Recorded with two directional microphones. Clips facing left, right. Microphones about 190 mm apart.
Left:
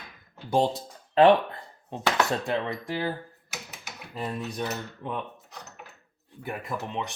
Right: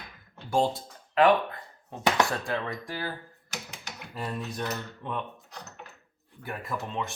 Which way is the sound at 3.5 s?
5° left (ahead or behind).